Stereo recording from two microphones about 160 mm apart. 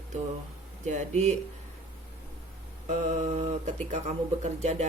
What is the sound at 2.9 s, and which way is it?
A woman's voice, 50° right (ahead or behind).